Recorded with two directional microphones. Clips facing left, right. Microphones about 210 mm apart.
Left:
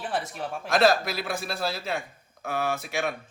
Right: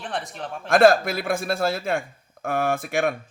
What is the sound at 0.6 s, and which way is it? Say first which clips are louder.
Speech: right 6 dB; 50° right (ahead or behind).